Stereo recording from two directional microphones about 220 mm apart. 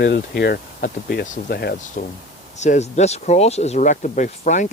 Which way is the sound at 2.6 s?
30° left (ahead or behind).